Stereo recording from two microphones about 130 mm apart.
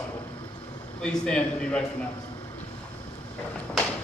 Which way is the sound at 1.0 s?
5° left (ahead or behind).